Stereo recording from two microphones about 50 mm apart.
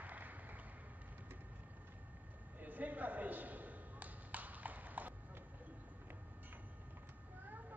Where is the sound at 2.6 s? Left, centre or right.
Right.